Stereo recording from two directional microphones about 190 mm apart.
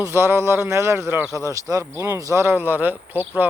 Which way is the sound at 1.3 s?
15° left (ahead or behind).